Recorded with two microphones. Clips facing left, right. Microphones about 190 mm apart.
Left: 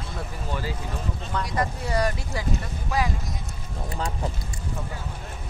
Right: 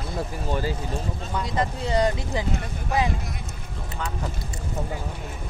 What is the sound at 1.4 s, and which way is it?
Speech, 25° right (ahead or behind).